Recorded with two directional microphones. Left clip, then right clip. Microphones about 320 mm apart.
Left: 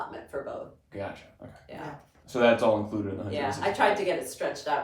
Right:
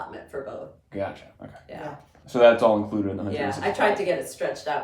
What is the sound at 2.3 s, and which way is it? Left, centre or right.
Speech, right.